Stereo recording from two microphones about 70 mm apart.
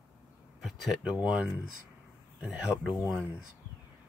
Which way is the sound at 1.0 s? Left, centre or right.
Centre.